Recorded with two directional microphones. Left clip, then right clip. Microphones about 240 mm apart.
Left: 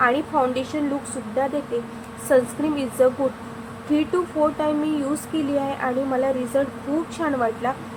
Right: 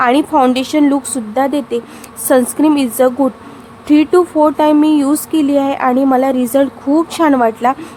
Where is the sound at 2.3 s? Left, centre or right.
Right.